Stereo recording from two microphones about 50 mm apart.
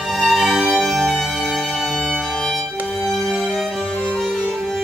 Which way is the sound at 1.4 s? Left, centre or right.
Centre.